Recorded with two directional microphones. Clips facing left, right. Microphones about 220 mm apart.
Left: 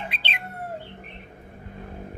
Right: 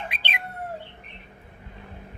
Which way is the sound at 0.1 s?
15° right (ahead or behind).